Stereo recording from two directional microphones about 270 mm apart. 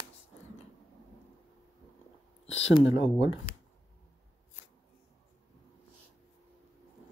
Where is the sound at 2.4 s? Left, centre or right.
Left.